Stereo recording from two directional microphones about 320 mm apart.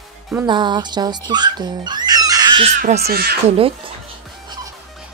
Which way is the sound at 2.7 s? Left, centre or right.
Right.